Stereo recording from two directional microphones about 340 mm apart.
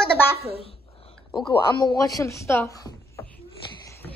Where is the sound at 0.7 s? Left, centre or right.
Centre.